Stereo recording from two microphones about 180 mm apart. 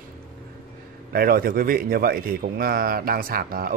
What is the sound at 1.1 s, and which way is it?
Speech, 55° right (ahead or behind).